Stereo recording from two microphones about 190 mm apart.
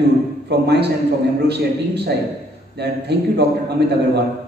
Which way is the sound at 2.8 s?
60° right (ahead or behind).